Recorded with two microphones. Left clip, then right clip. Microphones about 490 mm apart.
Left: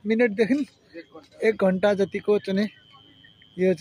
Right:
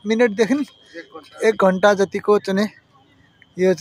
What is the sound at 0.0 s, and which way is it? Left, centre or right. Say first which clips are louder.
Speech: right 5 dB; left.